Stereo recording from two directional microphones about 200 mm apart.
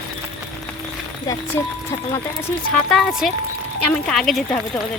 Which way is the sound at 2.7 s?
Centre (ahead or behind).